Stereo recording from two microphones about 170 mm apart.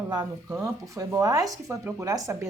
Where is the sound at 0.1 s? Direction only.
25° right (ahead or behind).